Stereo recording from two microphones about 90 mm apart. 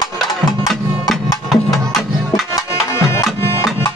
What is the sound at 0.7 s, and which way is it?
Music, centre (ahead or behind).